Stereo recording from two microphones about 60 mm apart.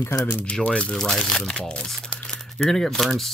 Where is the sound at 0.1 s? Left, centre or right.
Left.